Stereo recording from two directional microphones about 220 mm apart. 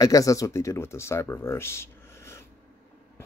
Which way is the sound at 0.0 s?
15° left (ahead or behind).